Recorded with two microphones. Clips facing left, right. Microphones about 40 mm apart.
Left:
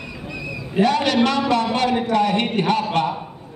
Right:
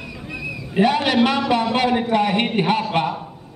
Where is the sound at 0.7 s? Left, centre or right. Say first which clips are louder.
Even; centre.